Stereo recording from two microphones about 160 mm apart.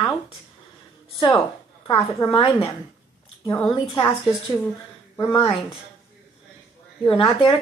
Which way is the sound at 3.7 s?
30° left (ahead or behind).